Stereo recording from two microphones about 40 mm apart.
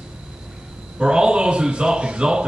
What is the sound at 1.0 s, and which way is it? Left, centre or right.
Speech, right.